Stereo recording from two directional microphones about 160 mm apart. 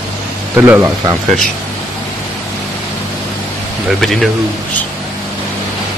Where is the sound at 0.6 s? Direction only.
15° right (ahead or behind).